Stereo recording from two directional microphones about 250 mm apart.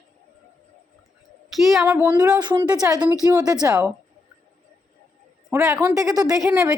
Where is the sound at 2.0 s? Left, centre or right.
Centre.